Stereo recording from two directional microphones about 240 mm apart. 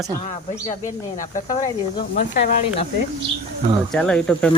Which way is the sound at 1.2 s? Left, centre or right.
Left.